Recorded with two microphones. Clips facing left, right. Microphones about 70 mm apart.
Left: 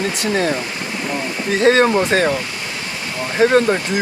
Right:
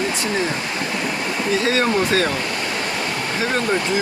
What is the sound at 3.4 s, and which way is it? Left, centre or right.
Speech, left.